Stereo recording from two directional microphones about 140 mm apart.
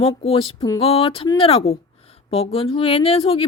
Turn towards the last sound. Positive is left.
turn(degrees=40)  # may be behind; listen again after turning